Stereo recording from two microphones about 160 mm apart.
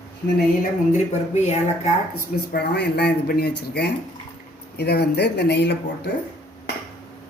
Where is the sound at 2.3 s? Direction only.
85° left.